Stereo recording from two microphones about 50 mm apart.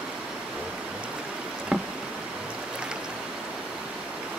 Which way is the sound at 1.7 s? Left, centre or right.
Centre.